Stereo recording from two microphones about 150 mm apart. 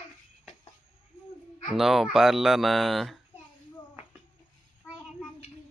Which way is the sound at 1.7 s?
Centre (ahead or behind).